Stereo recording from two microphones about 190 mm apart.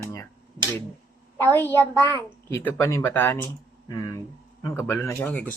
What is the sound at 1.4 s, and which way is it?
Speech, 10° left (ahead or behind).